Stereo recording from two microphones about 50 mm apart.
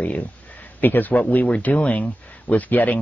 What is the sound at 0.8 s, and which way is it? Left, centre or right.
Speech, left.